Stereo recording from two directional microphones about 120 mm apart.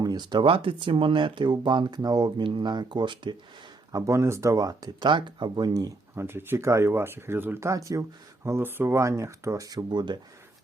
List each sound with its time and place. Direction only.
0.0 s speech: 35° right (ahead or behind)
3.9 s speech: 25° right (ahead or behind)
6.2 s speech: 20° right (ahead or behind); by 10.2 s 35° right (ahead or behind)